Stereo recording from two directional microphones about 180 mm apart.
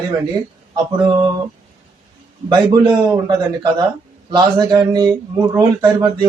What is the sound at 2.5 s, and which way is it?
Speech, 25° right (ahead or behind).